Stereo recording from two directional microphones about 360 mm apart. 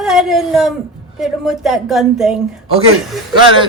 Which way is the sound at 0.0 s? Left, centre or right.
Centre.